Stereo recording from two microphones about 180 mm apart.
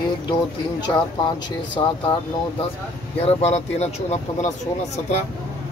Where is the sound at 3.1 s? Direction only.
35° left (ahead or behind).